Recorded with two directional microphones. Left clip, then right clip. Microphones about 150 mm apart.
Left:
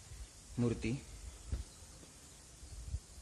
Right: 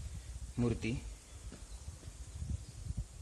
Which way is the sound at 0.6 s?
15° right (ahead or behind).